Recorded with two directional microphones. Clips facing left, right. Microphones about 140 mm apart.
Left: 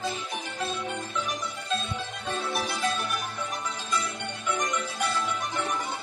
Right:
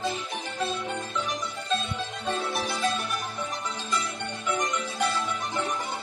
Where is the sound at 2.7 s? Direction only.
25° right (ahead or behind).